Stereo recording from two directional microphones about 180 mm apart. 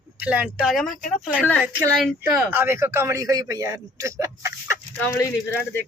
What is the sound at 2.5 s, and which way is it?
A man's voice, 10° right (ahead or behind).